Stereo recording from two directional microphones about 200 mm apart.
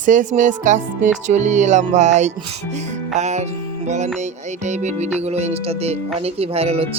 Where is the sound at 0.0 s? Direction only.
40° right (ahead or behind).